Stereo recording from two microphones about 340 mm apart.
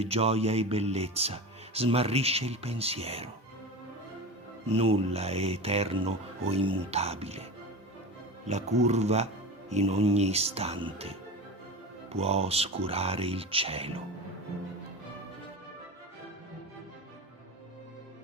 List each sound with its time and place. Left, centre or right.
0.0 s speech: centre
4.7 s speech: centre
8.4 s speech: centre